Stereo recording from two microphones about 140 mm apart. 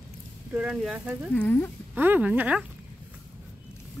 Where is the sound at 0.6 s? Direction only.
5° right (ahead or behind).